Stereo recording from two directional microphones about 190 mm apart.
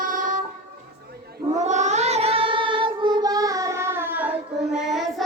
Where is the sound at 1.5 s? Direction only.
40° right (ahead or behind); by 5.2 s centre (ahead or behind).